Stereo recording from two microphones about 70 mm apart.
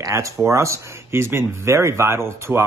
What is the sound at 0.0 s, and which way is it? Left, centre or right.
Speech, right.